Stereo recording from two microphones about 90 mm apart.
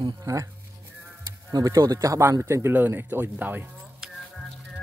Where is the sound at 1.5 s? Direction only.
40° right (ahead or behind); by 3.6 s 20° right (ahead or behind).